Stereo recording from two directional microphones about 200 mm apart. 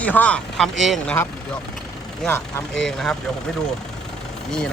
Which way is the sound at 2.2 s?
5° left (ahead or behind).